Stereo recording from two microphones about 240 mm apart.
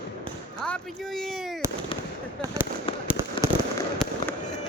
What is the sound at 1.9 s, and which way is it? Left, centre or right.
Fireworks, left.